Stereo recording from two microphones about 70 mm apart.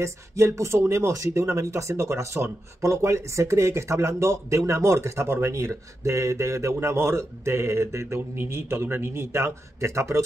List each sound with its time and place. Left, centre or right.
0.0 s speech: right